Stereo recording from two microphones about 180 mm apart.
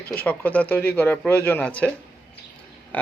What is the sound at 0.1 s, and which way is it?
A man's voice, 10° left (ahead or behind).